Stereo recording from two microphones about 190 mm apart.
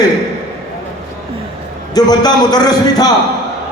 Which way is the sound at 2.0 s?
20° left (ahead or behind).